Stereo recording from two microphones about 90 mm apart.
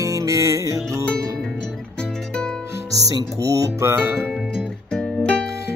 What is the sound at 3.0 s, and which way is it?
Music, 40° right (ahead or behind).